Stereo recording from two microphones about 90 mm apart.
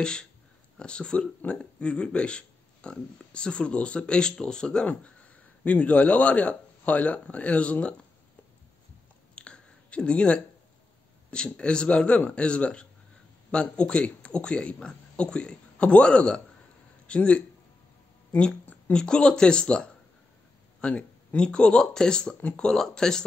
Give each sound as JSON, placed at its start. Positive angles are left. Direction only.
{"t": 0.0, "sound": "speech", "side_deg": 10}
{"t": 9.3, "sound": "a sound", "side_deg": 10}
{"t": 11.2, "sound": "speech", "side_deg": 10}